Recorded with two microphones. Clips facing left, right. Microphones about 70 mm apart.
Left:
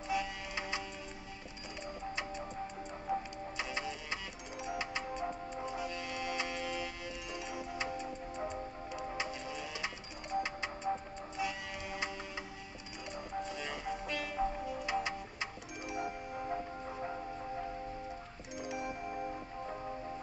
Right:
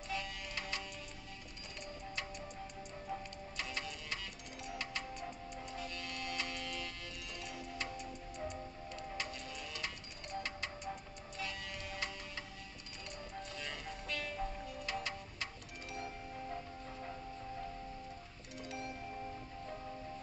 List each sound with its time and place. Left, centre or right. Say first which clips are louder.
0.1 s music: left 6 dB; centre
3.1 s music: left 8 dB; centre
8.0 s music: left 5 dB; left
8.9 s music: left 5 dB; centre
13.4 s music: left 6 dB; centre
18.6 s chime: left 5 dB; centre